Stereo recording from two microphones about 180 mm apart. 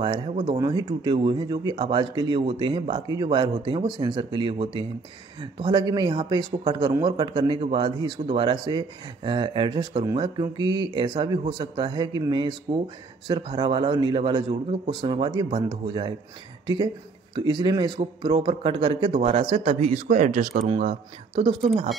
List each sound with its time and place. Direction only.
0.5 s speech: 20° right (ahead or behind); by 20.6 s 45° right (ahead or behind)